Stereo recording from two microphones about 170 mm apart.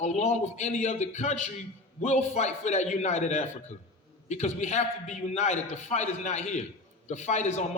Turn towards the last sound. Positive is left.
turn(degrees=40)  # may be behind; listen again after turning